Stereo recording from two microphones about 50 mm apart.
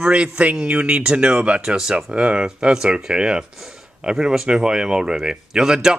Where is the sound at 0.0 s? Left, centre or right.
Centre.